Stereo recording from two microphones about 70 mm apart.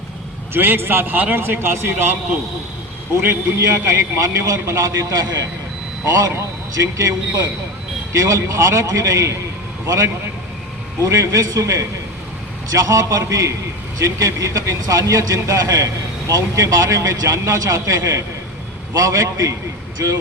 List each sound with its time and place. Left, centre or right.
0.5 s speech: right
3.6 s speech: right
6.7 s speech: right